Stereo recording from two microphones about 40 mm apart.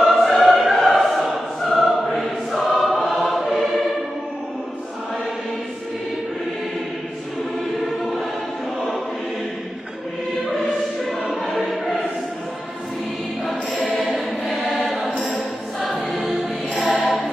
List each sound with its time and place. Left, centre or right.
0.0 s choir: centre
10.5 s choir: centre
14.1 s choir: centre
15.1 s a capella: left
15.8 s choir: centre